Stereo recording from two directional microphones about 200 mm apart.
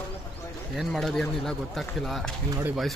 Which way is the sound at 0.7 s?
Centre (ahead or behind).